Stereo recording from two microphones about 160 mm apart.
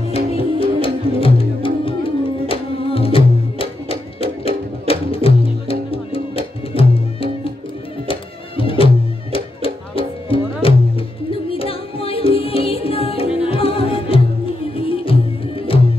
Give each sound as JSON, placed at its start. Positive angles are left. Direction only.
{"t": 0.1, "sound": "music", "side_deg": 35}